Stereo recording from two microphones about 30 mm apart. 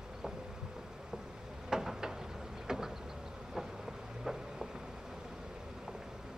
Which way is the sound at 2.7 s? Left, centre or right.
Centre.